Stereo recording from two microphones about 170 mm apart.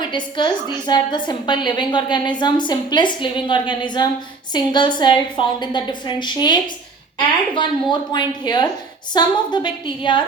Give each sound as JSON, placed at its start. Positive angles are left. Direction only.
{"t": 0.0, "sound": "a woman's voice", "side_deg": 25}